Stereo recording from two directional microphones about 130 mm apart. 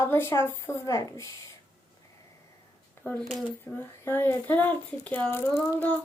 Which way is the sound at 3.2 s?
Centre (ahead or behind).